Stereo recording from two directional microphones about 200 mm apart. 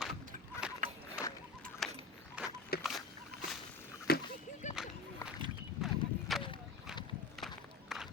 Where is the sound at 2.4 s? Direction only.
5° right (ahead or behind).